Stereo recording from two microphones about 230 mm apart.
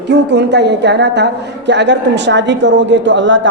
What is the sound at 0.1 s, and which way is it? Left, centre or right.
A woman's voice, right.